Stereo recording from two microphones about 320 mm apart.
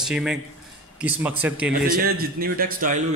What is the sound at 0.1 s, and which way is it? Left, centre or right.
Speech, centre.